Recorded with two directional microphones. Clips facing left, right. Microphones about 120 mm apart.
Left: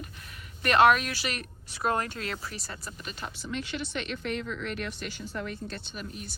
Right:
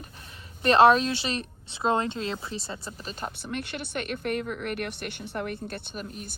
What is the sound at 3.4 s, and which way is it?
Speech, 55° right (ahead or behind).